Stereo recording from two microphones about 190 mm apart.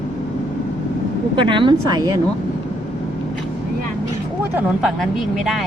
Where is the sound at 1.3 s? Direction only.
25° right (ahead or behind).